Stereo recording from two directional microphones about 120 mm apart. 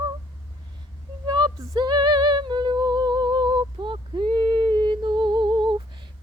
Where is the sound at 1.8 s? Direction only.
40° right (ahead or behind).